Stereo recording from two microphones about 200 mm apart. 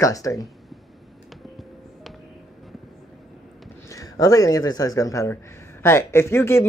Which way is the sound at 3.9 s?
15° left (ahead or behind).